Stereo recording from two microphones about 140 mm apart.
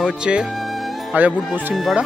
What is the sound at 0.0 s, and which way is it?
Music, 5° right (ahead or behind).